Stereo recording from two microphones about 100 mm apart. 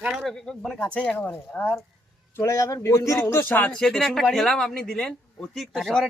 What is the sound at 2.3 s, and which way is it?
Speech, 30° left (ahead or behind).